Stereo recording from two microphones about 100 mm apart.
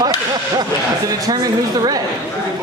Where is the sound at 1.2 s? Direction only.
40° right (ahead or behind).